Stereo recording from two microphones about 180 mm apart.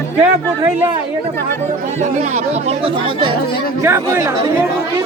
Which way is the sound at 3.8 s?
15° right (ahead or behind).